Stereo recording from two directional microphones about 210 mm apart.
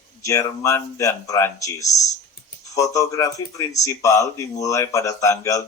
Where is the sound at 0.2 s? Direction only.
15° left (ahead or behind).